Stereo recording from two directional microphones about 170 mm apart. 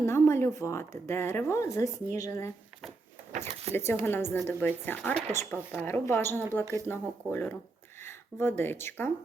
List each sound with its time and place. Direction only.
0.0 s speech: 15° left (ahead or behind)
3.7 s speech: 35° right (ahead or behind)
4.0 s speech: 10° left (ahead or behind)